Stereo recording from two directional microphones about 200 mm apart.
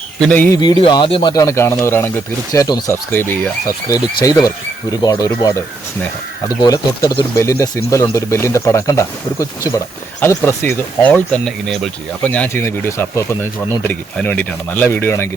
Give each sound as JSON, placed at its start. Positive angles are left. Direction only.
{"t": 0.2, "sound": "speech", "side_deg": 10}
{"t": 0.6, "sound": "speech", "side_deg": 20}